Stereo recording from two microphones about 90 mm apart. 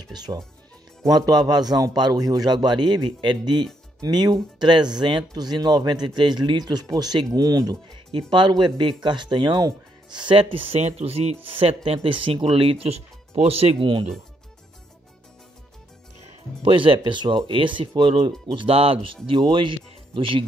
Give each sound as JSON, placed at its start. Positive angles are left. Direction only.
{"t": 0.1, "sound": "speech", "side_deg": -50}
{"t": 8.1, "sound": "speech", "side_deg": -60}
{"t": 16.6, "sound": "speech", "side_deg": -75}
{"t": 19.3, "sound": "speech", "side_deg": -65}